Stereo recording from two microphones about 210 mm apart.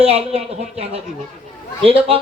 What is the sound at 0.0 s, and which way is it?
A man's voice, 30° right (ahead or behind).